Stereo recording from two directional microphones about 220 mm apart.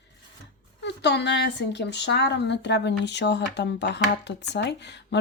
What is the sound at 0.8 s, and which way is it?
Speech, 50° left (ahead or behind).